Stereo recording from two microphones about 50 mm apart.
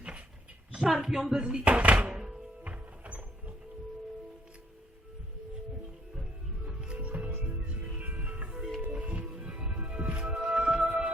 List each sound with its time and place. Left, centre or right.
0.8 s speech: centre
1.6 s music: right
2.6 s a sound: right
6.6 s music: right